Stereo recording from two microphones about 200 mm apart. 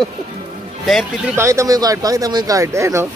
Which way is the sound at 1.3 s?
15° right (ahead or behind).